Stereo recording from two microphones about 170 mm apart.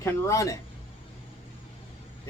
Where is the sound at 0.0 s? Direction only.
20° left (ahead or behind).